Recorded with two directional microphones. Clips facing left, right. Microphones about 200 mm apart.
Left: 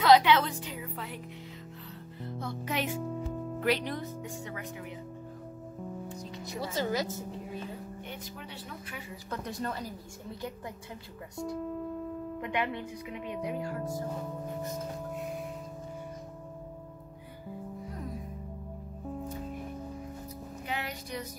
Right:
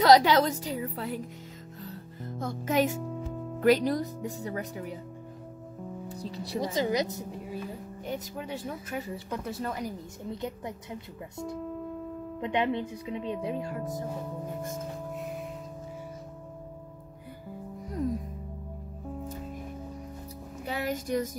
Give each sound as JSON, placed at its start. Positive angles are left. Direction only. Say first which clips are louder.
{"t": 0.0, "sound": "speech", "louder": "right 2 dB", "side_deg": -40}
{"t": 1.9, "sound": "music", "louder": "right 1 dB", "side_deg": -45}
{"t": 3.0, "sound": "music", "louder": "left 1 dB", "side_deg": 0}
{"t": 3.6, "sound": "speech", "louder": "right 8 dB", "side_deg": -40}
{"t": 6.0, "sound": "speech", "louder": "right 3 dB", "side_deg": -35}
{"t": 6.6, "sound": "a woman's voice", "louder": "right 3 dB", "side_deg": -15}
{"t": 8.0, "sound": "speech", "louder": "right 7 dB", "side_deg": -40}
{"t": 9.3, "sound": "a woman's voice", "louder": "right 1 dB", "side_deg": -5}
{"t": 12.4, "sound": "speech", "louder": "right 6 dB", "side_deg": -25}
{"t": 15.1, "sound": "music", "louder": "even", "side_deg": 0}
{"t": 20.6, "sound": "music", "louder": "right 7 dB", "side_deg": -40}